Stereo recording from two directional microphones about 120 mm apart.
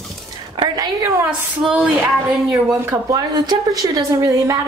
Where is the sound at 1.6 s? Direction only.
10° right (ahead or behind).